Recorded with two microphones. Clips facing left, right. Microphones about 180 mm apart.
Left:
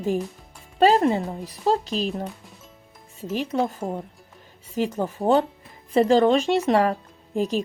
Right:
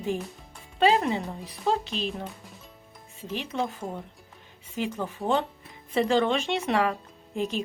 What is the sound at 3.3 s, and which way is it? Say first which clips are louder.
Speech: left 6 dB; 40° left (ahead or behind).